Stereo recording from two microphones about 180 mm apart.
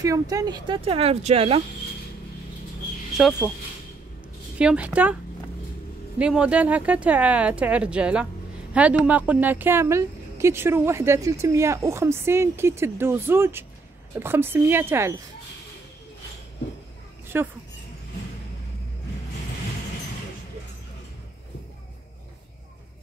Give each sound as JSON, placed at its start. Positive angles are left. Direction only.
{"t": 0.0, "sound": "speech", "side_deg": -20}
{"t": 3.4, "sound": "speech", "side_deg": 10}
{"t": 4.6, "sound": "speech", "side_deg": -5}
{"t": 6.1, "sound": "speech", "side_deg": -5}
{"t": 17.3, "sound": "speech", "side_deg": -10}